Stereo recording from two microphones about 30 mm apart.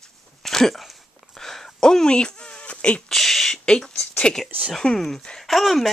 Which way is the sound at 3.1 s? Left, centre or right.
Centre.